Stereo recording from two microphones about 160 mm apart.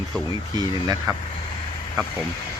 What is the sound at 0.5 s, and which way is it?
Speech, 25° right (ahead or behind).